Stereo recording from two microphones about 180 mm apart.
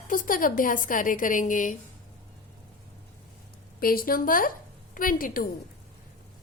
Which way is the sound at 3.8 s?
55° left (ahead or behind).